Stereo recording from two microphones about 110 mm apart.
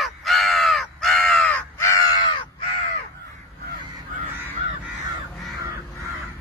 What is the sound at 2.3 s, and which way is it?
Crow, 50° left (ahead or behind).